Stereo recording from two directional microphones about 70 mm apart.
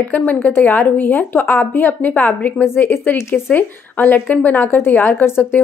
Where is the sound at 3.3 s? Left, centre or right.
Left.